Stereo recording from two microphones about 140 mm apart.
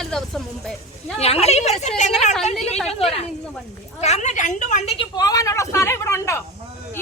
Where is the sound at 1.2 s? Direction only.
50° left (ahead or behind).